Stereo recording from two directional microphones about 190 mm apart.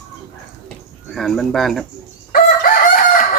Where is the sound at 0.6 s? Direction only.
Centre (ahead or behind).